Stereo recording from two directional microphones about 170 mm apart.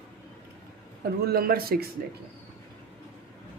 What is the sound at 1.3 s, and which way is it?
Speech, 60° right (ahead or behind).